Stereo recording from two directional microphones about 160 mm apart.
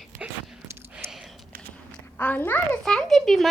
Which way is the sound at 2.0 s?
10° left (ahead or behind).